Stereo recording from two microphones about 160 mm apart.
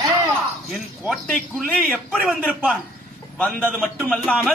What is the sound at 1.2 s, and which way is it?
A man's voice, 5° left (ahead or behind).